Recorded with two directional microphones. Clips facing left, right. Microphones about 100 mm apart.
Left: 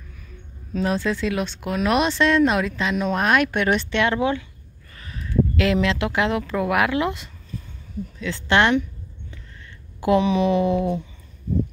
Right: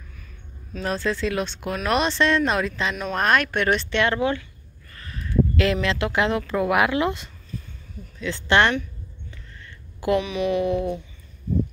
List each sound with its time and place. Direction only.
0.8 s a woman's voice: 10° left (ahead or behind)
9.9 s a woman's voice: 25° left (ahead or behind)